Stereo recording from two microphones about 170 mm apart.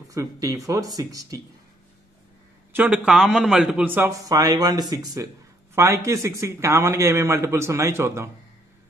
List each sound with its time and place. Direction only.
0.1 s speech: 20° right (ahead or behind)
2.7 s a man's voice: 10° right (ahead or behind)